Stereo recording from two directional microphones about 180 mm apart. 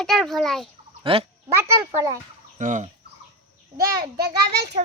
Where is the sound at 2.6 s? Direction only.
45° right (ahead or behind).